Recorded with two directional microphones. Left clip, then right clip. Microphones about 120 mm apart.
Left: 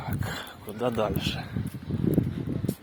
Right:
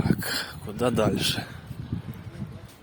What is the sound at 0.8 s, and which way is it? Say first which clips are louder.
Speech: right 3 dB; 90° right.